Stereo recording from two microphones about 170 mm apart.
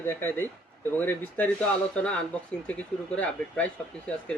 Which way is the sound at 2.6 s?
10° left (ahead or behind).